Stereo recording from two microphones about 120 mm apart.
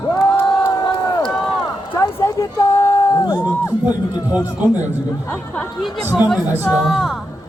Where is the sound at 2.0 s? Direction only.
25° left (ahead or behind).